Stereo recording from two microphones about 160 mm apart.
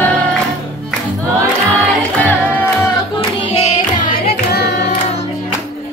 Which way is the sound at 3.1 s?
35° left (ahead or behind).